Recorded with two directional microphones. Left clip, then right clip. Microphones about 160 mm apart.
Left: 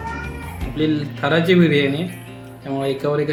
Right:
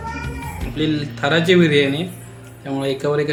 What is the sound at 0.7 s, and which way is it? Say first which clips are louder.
Speech: left 1 dB; 5° left (ahead or behind).